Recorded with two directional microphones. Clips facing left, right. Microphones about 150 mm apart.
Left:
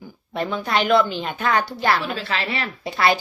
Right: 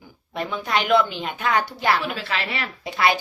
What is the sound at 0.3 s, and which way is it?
Speech, 10° right (ahead or behind).